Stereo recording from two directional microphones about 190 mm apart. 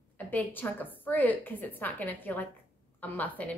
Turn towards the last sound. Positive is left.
turn(degrees=10)  # may be behind; listen again after turning